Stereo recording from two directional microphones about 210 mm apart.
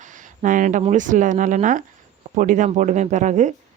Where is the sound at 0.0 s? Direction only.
40° right (ahead or behind).